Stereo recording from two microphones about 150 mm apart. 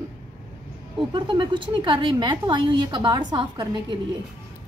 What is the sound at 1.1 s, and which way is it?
A woman's voice, 35° right (ahead or behind).